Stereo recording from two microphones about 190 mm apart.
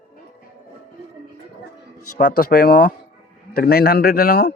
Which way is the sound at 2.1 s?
45° left (ahead or behind).